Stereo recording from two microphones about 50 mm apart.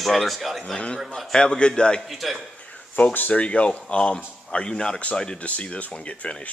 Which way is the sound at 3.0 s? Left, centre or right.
Left.